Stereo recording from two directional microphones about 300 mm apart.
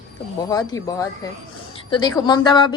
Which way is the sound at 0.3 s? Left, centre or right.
Centre.